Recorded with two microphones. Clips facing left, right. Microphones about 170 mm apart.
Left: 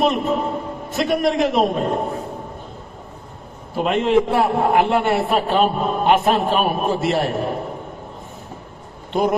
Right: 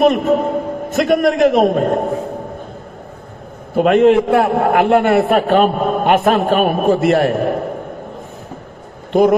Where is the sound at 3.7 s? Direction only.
55° right (ahead or behind).